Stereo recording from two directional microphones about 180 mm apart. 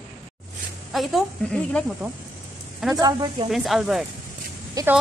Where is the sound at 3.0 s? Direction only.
25° right (ahead or behind).